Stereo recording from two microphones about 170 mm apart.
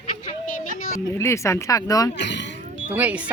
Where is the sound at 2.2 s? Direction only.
90° left.